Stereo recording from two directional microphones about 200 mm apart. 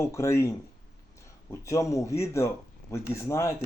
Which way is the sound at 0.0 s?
15° left (ahead or behind).